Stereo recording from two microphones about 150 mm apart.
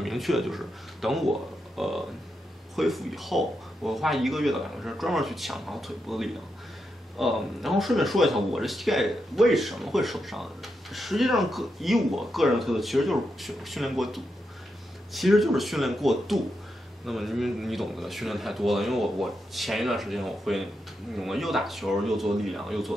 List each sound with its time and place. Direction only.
0.0 s speech: centre (ahead or behind)